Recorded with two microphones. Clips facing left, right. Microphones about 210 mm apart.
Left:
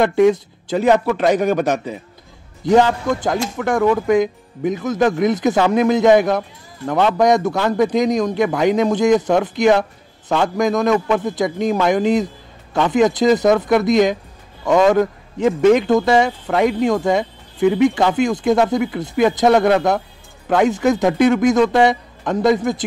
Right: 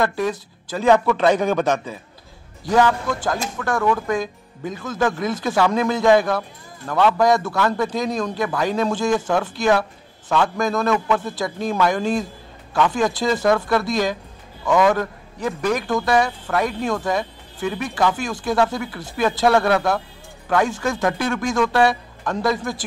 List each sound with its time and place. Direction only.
0.0 s a man's voice: 20° left (ahead or behind)